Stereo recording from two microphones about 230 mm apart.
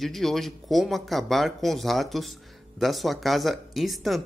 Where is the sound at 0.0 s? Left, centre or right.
Centre.